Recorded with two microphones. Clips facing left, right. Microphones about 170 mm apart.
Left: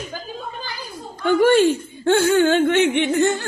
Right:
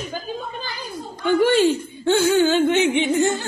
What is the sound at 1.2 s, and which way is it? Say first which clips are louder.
Speech: left 2 dB; 50° left (ahead or behind).